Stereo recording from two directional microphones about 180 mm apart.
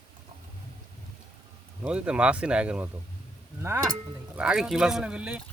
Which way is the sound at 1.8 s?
5° right (ahead or behind).